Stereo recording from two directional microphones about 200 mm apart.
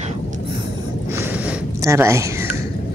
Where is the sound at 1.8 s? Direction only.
15° right (ahead or behind).